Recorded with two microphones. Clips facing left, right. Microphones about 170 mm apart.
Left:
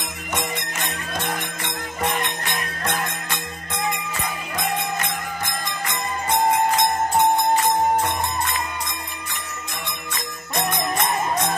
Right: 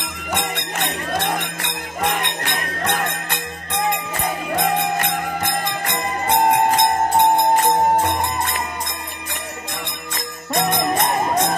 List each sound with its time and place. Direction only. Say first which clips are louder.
0.3 s music: right 3 dB; 65° right (ahead or behind)
4.9 s music: right 5 dB; 60° right (ahead or behind)
10.1 s music: right 5 dB; 40° right (ahead or behind)